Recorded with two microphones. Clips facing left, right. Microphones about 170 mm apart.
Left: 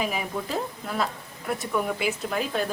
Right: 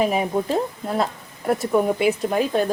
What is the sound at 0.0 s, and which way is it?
Speech, 35° right (ahead or behind).